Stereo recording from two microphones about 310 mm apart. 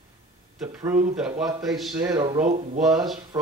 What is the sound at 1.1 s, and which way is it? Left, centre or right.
Speech, centre.